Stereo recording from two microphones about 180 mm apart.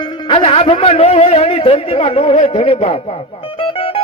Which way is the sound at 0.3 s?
30° left (ahead or behind).